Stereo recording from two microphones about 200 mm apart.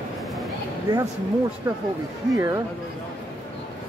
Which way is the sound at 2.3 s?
15° right (ahead or behind).